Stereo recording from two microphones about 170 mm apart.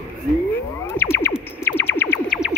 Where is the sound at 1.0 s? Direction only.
15° left (ahead or behind).